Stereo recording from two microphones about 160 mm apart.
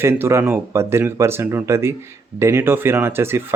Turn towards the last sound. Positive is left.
turn(degrees=-15)  # may be behind; listen again after turning